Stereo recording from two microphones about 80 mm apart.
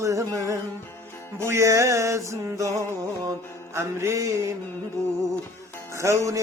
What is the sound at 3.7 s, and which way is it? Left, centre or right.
Music, right.